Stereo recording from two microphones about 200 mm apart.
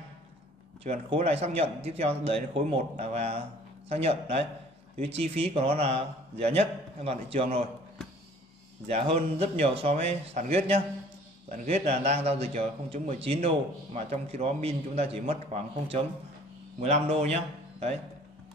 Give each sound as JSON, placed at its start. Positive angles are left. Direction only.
{"t": 0.8, "sound": "a man's voice", "side_deg": -30}
{"t": 8.8, "sound": "a man's voice", "side_deg": -30}